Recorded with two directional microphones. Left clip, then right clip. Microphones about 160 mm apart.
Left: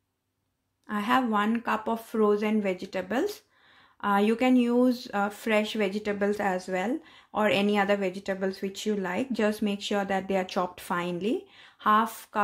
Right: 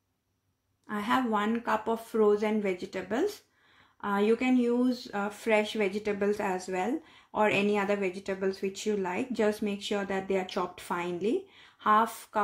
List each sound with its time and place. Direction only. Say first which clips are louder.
0.8 s speech: left 3 dB; 25° left (ahead or behind)